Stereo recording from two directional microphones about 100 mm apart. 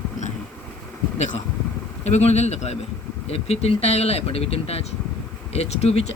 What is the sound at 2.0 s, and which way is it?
Speech, 90° left.